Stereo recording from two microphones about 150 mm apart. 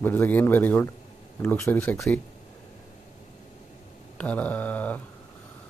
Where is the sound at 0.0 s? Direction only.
15° left (ahead or behind).